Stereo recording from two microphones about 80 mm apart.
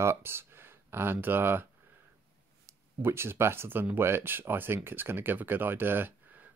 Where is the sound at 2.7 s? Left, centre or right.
Right.